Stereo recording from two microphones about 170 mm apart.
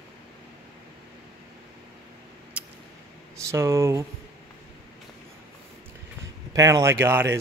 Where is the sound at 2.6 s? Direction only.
10° right (ahead or behind).